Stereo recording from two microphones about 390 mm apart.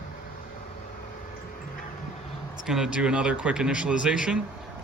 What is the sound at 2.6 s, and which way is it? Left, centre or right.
A man's voice, centre.